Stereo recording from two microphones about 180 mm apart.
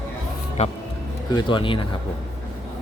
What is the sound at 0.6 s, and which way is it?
Speech, 40° left (ahead or behind).